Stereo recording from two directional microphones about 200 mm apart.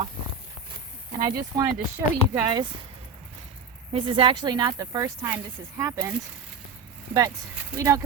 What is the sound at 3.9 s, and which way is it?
Speech, 25° right (ahead or behind).